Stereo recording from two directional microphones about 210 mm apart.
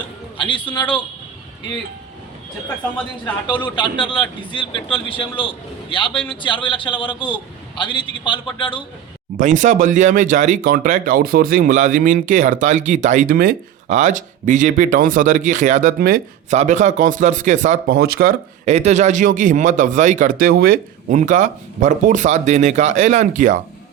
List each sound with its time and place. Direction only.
0.3 s a man's voice: 25° left (ahead or behind)
3.4 s speech: 20° left (ahead or behind)
9.4 s speech: 35° right (ahead or behind)